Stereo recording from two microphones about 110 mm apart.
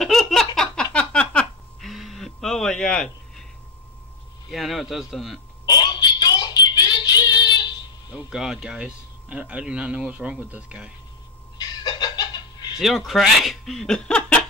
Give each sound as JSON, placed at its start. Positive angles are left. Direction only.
{"t": 0.0, "sound": "giggle", "side_deg": 5}
{"t": 0.9, "sound": "a sound", "side_deg": 10}
{"t": 4.5, "sound": "speech", "side_deg": 0}
{"t": 5.7, "sound": "child singing", "side_deg": 40}
{"t": 8.3, "sound": "speech", "side_deg": -5}
{"t": 11.5, "sound": "a sound", "side_deg": 40}
{"t": 12.7, "sound": "speech", "side_deg": 0}